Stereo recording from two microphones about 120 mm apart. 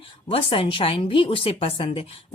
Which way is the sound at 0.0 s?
50° left (ahead or behind).